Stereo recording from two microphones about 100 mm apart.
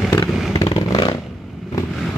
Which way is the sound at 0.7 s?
40° left (ahead or behind).